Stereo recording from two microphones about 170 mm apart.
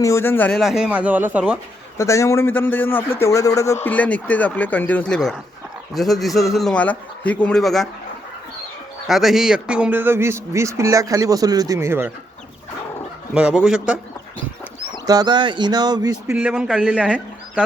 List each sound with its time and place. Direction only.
0.0 s a man's voice: 15° left (ahead or behind)
0.6 s a man's voice: centre (ahead or behind)
2.0 s a man's voice: 15° left (ahead or behind); by 7.9 s centre (ahead or behind)
9.0 s a man's voice: centre (ahead or behind)
13.3 s a man's voice: 5° right (ahead or behind)
15.0 s speech: 20° right (ahead or behind)
16.3 s a man's voice: 5° right (ahead or behind)